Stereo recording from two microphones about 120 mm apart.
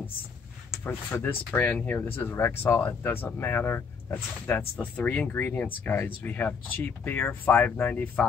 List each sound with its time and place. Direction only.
0.8 s speech: 15° left (ahead or behind)